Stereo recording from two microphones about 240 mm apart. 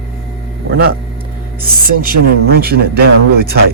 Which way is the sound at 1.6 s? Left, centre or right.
Right.